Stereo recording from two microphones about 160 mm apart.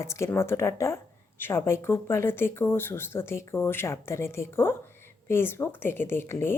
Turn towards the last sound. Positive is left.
turn(degrees=15)  # may be behind; listen again after turning